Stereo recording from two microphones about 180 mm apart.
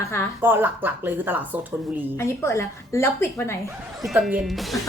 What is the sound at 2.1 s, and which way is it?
A woman's voice, 15° left (ahead or behind).